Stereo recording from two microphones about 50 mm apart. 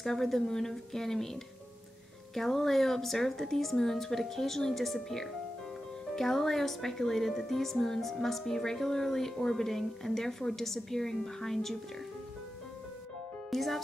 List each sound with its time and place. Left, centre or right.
0.0 s speech: centre
13.5 s speech: centre